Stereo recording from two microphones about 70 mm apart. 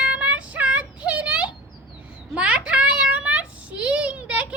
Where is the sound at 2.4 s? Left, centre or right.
Centre.